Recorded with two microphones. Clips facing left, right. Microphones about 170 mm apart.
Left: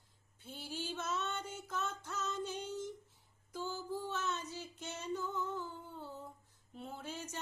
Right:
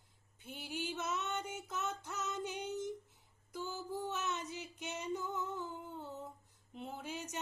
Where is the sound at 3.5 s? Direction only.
15° right (ahead or behind).